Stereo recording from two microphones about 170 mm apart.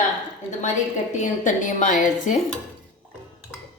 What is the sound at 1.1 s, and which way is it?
A woman's voice, 45° left (ahead or behind).